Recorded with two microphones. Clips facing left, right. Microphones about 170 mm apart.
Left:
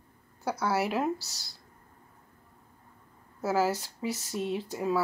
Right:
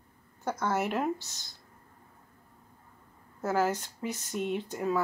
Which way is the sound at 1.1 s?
40° left (ahead or behind).